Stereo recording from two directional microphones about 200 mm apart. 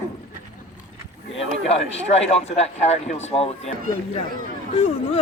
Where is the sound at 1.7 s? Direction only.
30° left (ahead or behind).